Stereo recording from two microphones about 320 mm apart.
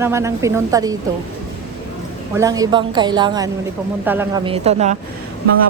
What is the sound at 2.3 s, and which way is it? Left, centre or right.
Speech, centre.